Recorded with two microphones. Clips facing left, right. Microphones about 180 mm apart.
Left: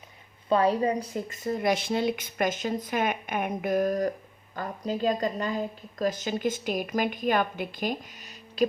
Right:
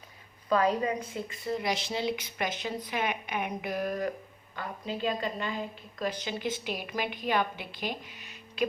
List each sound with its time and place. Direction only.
0.4 s a woman's voice: 30° left (ahead or behind)